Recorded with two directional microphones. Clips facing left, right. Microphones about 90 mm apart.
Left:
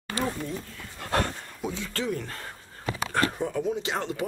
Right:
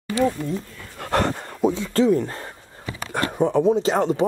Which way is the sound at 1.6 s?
40° right (ahead or behind).